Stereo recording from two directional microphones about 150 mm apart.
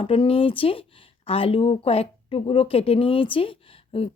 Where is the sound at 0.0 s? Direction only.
35° left (ahead or behind).